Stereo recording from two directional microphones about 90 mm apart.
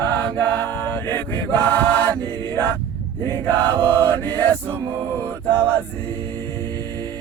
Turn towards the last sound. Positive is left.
turn(degrees=20)  # may be behind; listen again after turning